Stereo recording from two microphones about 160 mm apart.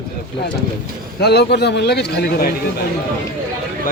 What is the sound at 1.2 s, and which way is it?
A man's voice, 90° left.